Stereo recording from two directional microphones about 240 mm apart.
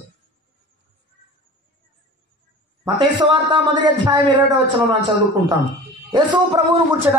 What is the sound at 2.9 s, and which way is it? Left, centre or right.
A man's voice, centre.